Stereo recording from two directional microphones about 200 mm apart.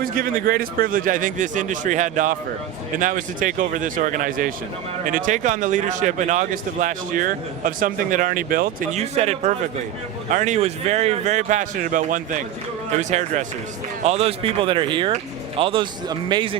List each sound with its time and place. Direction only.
0.0 s speech: 45° right (ahead or behind); by 16.6 s 25° right (ahead or behind)